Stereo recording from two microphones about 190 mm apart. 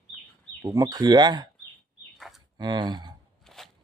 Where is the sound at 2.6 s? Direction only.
20° right (ahead or behind).